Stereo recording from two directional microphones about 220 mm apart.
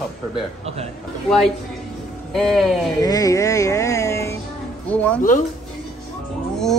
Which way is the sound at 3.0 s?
15° left (ahead or behind).